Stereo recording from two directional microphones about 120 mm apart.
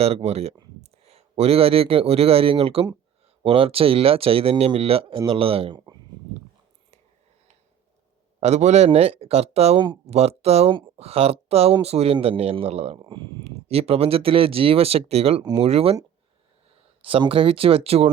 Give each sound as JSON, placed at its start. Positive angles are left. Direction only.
{"t": 0.0, "sound": "speech", "side_deg": -60}
{"t": 8.4, "sound": "speech", "side_deg": -65}
{"t": 13.1, "sound": "speech", "side_deg": -40}
{"t": 13.4, "sound": "speech", "side_deg": -55}
{"t": 17.0, "sound": "speech", "side_deg": -50}